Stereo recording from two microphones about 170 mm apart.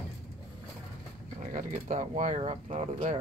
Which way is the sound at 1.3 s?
50° right (ahead or behind).